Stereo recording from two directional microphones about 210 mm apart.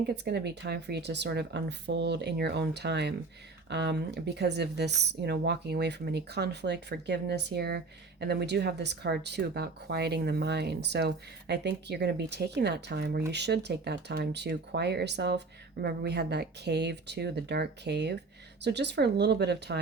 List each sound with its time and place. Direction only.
0.3 s speech: 50° right (ahead or behind)